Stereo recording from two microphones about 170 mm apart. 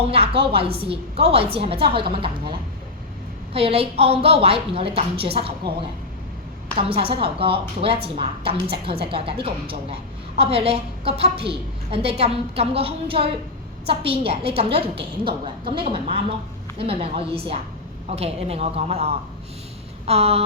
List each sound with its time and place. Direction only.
0.1 s a woman's voice: 35° right (ahead or behind)
6.7 s a woman's voice: 35° right (ahead or behind)